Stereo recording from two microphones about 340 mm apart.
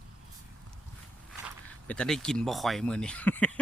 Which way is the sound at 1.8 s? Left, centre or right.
Centre.